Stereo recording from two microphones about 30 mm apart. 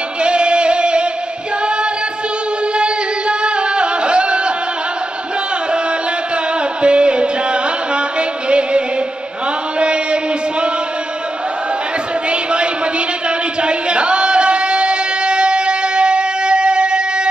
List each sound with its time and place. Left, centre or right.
0.2 s music: right
2.8 s music: right
6.8 s music: right
9.8 s chant: right
12.3 s a sound: right
13.6 s music: right